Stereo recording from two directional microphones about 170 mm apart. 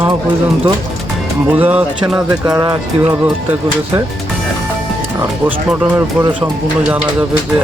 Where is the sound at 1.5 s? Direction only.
10° right (ahead or behind).